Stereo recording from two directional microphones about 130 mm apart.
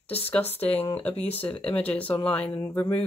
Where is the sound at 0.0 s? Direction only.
50° left (ahead or behind).